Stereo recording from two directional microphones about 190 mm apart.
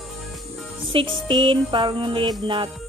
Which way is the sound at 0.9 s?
25° right (ahead or behind).